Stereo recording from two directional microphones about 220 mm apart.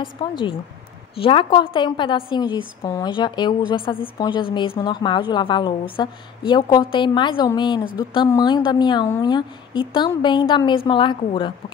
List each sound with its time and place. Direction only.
0.0 s a woman's voice: 20° left (ahead or behind)